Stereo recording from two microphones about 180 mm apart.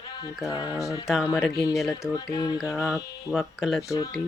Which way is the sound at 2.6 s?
Centre (ahead or behind).